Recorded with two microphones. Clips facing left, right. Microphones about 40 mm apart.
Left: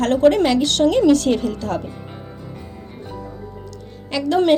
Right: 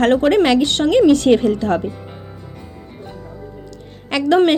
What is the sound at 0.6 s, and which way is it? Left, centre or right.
A woman's voice, right.